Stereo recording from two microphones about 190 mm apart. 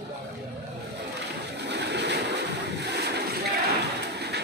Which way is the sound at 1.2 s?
65° right (ahead or behind).